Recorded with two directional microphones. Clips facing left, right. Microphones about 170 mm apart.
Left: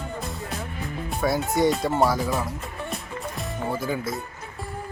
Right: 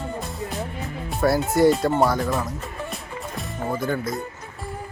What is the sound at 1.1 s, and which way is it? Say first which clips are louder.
Speech: right 4 dB; centre (ahead or behind).